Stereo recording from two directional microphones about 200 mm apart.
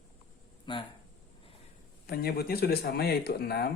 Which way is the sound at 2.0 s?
50° left (ahead or behind).